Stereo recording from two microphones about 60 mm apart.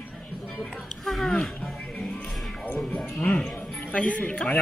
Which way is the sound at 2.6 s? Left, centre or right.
Centre.